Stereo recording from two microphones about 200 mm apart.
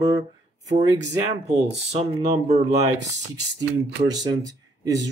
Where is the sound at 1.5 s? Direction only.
30° right (ahead or behind).